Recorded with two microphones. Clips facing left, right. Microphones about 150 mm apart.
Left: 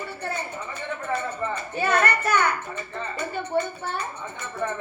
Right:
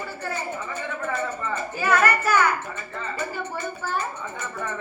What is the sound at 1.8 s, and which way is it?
Music, 30° left (ahead or behind).